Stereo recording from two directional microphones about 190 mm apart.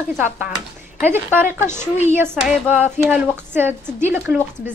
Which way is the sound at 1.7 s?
40° left (ahead or behind).